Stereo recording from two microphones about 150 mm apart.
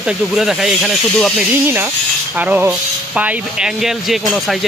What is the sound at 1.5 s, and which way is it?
Speech, 15° right (ahead or behind).